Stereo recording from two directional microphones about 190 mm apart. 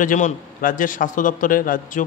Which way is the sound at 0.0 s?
45° left (ahead or behind).